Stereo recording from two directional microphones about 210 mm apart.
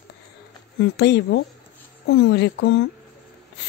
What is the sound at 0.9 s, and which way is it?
Speech, 55° left (ahead or behind).